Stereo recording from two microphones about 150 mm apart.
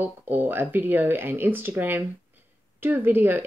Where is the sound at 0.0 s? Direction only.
15° right (ahead or behind).